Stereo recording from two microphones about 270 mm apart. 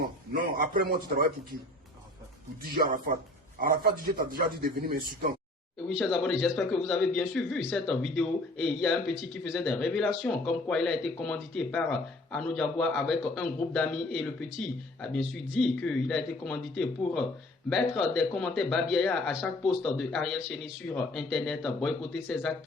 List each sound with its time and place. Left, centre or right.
0.5 s a man's voice: right
2.8 s a man's voice: right
6.0 s a man's voice: centre